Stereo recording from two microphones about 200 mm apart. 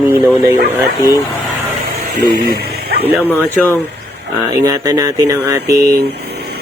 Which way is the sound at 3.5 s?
5° left (ahead or behind).